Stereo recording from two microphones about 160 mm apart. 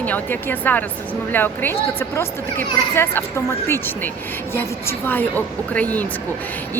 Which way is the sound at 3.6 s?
15° left (ahead or behind).